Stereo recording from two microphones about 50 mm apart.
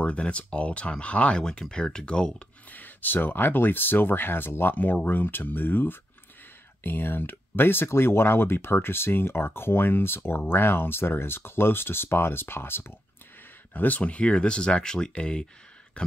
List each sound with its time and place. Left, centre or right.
0.0 s speech: left
1.4 s speech: centre
2.7 s speech: left
13.7 s speech: left